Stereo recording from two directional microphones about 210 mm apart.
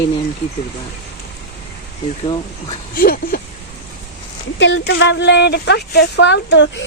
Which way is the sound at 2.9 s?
45° left (ahead or behind).